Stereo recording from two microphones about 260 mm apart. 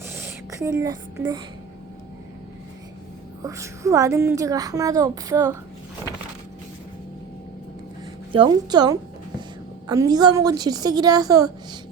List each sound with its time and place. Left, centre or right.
0.2 s a sound: centre
3.4 s a woman's voice: centre
8.3 s a woman's voice: centre